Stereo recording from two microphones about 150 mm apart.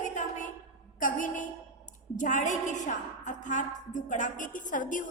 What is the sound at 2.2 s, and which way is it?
A woman's voice, 55° left (ahead or behind).